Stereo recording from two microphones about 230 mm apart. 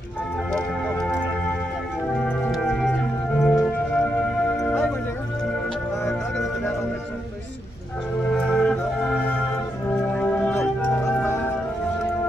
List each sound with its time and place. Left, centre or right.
0.5 s organ: centre
2.2 s music: centre
6.0 s music: centre
8.3 s music: centre